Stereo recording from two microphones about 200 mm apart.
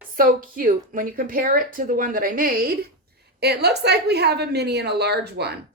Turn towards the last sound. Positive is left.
turn(degrees=-55)  # may be behind; listen again after turning